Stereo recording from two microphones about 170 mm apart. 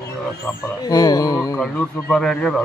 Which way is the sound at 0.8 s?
20° left (ahead or behind).